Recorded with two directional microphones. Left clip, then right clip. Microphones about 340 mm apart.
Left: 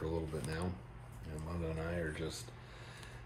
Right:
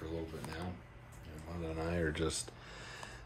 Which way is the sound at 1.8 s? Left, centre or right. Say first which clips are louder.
Right 7 dB; right.